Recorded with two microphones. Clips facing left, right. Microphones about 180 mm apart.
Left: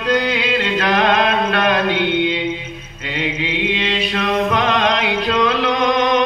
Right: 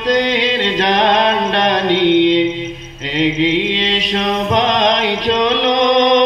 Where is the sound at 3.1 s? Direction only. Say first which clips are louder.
Right 8 dB; 30° right (ahead or behind).